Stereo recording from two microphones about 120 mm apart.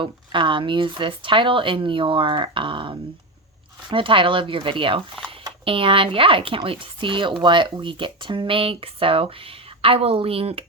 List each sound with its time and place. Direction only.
0.0 s speech: 45° right (ahead or behind)